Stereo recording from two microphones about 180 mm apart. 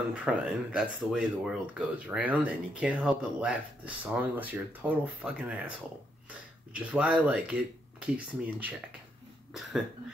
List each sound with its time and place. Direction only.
0.1 s speech: 5° right (ahead or behind)
6.7 s speech: 5° right (ahead or behind)
9.5 s cough: centre (ahead or behind)